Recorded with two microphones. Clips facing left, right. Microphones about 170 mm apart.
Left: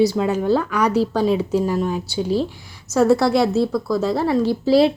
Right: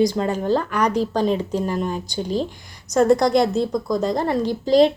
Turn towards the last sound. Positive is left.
turn(degrees=5)  # may be behind; listen again after turning